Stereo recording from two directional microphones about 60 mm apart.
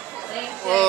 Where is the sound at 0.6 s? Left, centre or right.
Centre.